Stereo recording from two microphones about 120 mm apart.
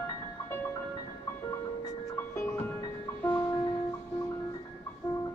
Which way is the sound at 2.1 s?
20° left (ahead or behind).